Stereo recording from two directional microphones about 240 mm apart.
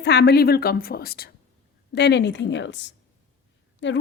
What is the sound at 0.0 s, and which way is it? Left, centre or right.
A woman's voice, left.